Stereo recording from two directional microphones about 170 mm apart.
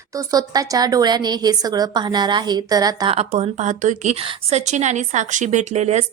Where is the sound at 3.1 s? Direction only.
35° right (ahead or behind).